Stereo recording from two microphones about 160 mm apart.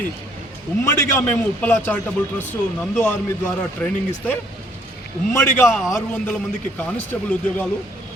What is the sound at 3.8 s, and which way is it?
Speech, 10° left (ahead or behind).